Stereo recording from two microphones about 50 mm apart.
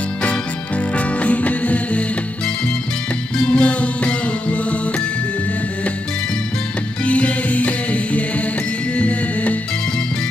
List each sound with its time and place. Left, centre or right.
0.2 s music: left
7.1 s music: left